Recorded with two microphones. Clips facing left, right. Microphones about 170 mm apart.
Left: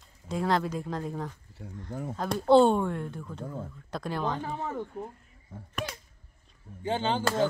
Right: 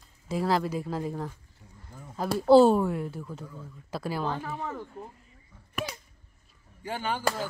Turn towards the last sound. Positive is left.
turn(degrees=25)  # may be behind; listen again after turning